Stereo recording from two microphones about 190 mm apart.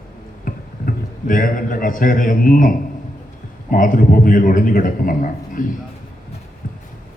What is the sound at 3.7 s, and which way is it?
A man's voice, 45° left (ahead or behind).